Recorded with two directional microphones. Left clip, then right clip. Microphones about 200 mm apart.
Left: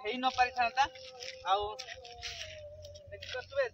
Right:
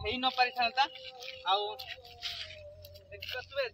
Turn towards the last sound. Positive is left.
turn(degrees=15)  # may be behind; listen again after turning